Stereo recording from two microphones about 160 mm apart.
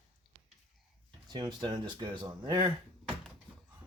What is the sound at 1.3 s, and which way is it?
Speech, 30° right (ahead or behind).